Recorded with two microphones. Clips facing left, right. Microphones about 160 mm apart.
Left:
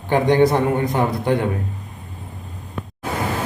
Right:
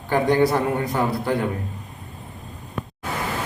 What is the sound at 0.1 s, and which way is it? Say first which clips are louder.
A man's voice: left 3 dB; 20° left (ahead or behind).